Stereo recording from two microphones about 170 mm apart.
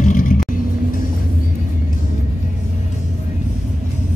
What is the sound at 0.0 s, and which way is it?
Vehicle, 50° left (ahead or behind).